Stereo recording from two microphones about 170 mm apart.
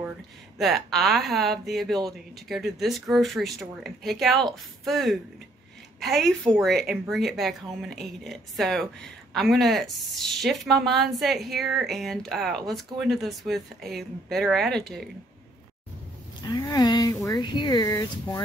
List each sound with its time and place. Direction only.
0.6 s a woman's voice: centre (ahead or behind)
16.4 s speech: 20° left (ahead or behind)